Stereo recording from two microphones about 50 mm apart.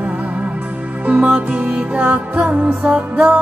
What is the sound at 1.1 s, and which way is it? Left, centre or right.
Music, right.